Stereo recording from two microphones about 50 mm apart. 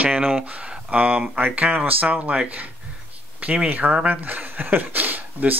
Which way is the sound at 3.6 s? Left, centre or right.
Right.